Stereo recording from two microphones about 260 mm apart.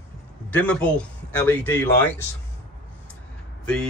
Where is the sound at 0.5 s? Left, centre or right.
Centre.